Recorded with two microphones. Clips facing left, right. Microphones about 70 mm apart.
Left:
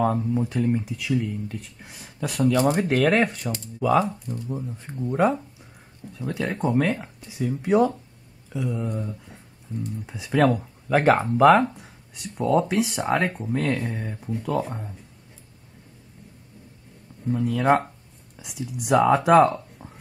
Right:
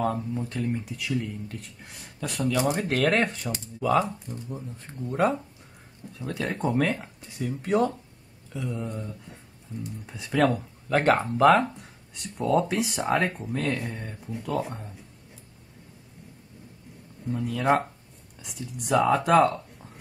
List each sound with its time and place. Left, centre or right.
0.0 s speech: centre
0.8 s speech: centre
2.5 s speech: left
2.9 s speech: centre
4.5 s speech: centre
17.3 s speech: centre